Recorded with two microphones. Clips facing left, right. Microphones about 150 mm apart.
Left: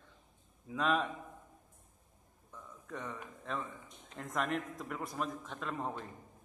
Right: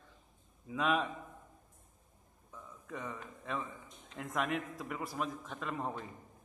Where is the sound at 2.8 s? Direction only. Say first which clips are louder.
Even; 5° right (ahead or behind).